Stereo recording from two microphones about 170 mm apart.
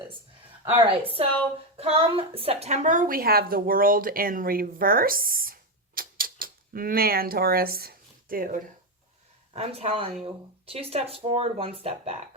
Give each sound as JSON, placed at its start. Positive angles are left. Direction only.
{"t": 1.0, "sound": "a woman's voice", "side_deg": -35}
{"t": 9.5, "sound": "speech", "side_deg": -35}